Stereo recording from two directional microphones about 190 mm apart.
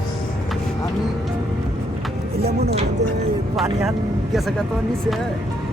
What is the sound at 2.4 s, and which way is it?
Speech, 55° right (ahead or behind).